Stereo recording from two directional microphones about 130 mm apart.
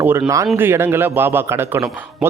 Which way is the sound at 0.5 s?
15° right (ahead or behind).